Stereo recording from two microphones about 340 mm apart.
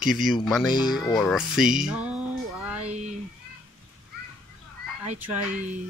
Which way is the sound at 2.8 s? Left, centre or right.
Centre.